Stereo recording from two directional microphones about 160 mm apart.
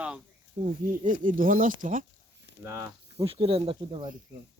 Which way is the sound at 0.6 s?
55° right (ahead or behind).